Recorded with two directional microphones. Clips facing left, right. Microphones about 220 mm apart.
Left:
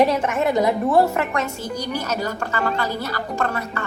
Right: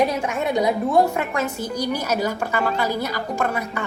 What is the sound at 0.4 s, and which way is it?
A child's voice, centre (ahead or behind).